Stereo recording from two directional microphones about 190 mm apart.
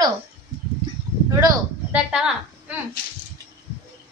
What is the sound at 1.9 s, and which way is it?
Speech, 5° right (ahead or behind).